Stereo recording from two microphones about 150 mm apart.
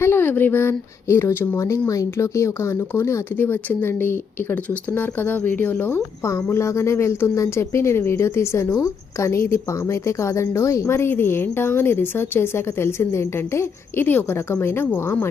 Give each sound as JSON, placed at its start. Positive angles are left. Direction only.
{"t": 0.0, "sound": "speech", "side_deg": 15}